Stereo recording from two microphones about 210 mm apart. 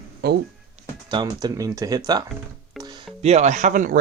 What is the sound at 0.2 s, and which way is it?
Music, 50° right (ahead or behind).